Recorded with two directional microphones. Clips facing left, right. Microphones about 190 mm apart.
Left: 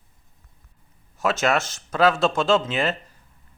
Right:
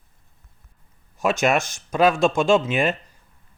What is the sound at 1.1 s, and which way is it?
Speech, 15° right (ahead or behind).